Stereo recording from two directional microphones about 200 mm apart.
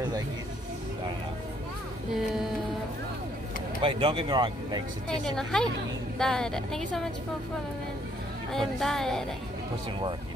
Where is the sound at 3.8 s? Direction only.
25° right (ahead or behind).